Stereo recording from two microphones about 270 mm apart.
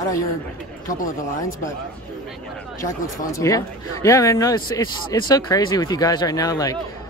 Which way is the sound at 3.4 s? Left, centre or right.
Centre.